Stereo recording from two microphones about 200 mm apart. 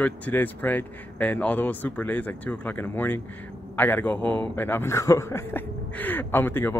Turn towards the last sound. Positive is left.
turn(degrees=10)  # may be behind; listen again after turning